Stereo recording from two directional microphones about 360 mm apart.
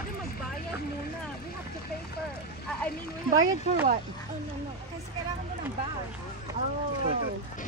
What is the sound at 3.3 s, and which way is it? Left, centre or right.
Speech, centre.